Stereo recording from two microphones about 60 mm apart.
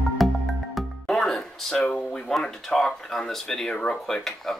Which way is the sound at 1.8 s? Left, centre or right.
Centre.